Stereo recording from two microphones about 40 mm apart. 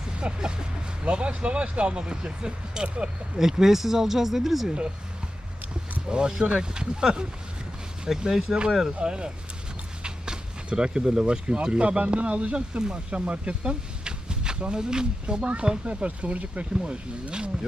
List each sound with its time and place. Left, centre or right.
0.2 s speech: right
3.3 s speech: centre
6.1 s speech: right
16.0 s speech: right
16.8 s speech: right